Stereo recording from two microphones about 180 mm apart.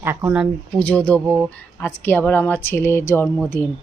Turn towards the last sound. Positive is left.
turn(degrees=15)  # may be behind; listen again after turning